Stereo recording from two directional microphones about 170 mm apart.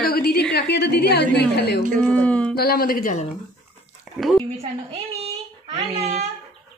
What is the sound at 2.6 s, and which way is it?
Speech, 60° left (ahead or behind).